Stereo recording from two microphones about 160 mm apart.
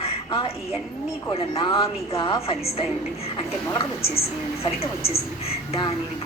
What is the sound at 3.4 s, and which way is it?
A woman's voice, 35° left (ahead or behind).